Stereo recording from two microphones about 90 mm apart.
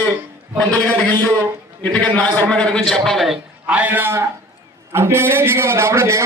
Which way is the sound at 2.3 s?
15° left (ahead or behind).